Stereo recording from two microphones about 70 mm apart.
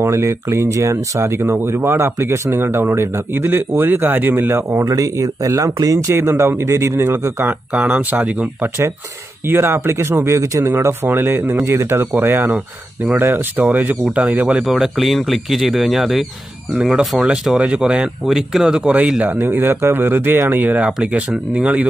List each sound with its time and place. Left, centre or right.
0.0 s speech: right
4.9 s speech: right
7.7 s speech: right
9.5 s speech: right
10.7 s speech: right; by 14.6 s centre
14.6 s speech: centre
17.3 s speech: centre
19.4 s speech: right